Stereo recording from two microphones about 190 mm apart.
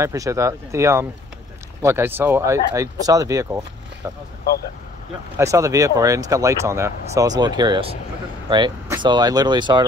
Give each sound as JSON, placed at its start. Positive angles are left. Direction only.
{"t": 0.0, "sound": "speech", "side_deg": -15}
{"t": 5.4, "sound": "speech", "side_deg": -15}